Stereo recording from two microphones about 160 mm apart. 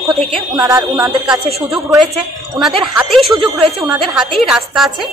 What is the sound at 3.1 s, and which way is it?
A woman's voice, centre (ahead or behind).